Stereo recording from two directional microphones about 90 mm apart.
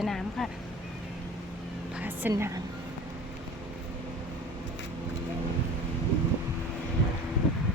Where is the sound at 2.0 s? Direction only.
20° right (ahead or behind).